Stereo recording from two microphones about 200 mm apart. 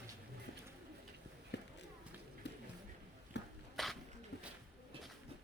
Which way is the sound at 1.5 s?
60° left (ahead or behind).